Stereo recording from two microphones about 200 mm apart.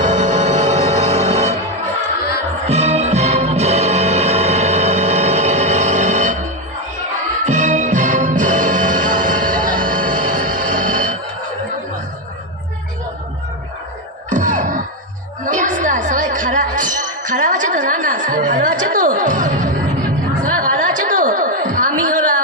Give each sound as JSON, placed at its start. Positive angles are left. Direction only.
{"t": 0.0, "sound": "music", "side_deg": -35}
{"t": 2.6, "sound": "music", "side_deg": -35}
{"t": 7.4, "sound": "music", "side_deg": -35}
{"t": 14.3, "sound": "a sound", "side_deg": -40}
{"t": 20.4, "sound": "chatter", "side_deg": -40}